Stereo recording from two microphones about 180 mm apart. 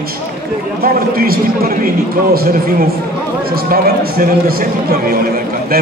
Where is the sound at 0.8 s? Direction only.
55° right (ahead or behind).